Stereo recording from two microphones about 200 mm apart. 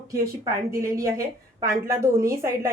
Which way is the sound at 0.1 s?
15° right (ahead or behind).